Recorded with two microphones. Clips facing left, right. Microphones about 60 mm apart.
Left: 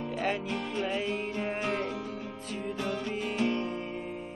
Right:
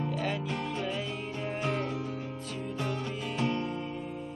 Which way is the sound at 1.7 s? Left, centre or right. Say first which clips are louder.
Even; left.